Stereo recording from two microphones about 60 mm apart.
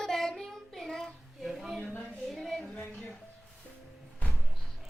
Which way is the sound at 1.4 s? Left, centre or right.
Centre.